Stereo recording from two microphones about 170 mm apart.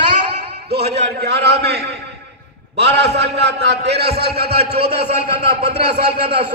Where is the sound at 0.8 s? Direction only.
40° right (ahead or behind).